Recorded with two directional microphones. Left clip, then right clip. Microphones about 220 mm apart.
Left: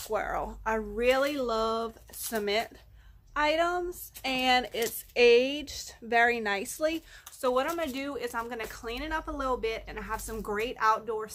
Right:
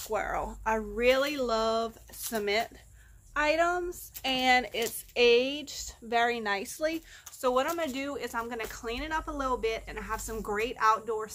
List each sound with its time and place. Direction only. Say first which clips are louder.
0.0 s speech: even; centre (ahead or behind); by 7.0 s 20° left (ahead or behind)
7.4 s speech: even; centre (ahead or behind)